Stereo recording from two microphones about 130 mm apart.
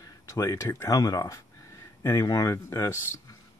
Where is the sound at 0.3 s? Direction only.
20° left (ahead or behind).